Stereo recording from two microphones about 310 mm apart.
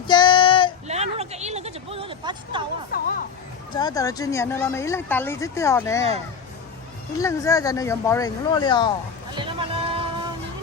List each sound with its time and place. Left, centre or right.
0.1 s child singing: centre
0.9 s a sound: right
2.9 s speech: left
3.7 s speech: centre
7.2 s speech: centre
9.3 s a sound: centre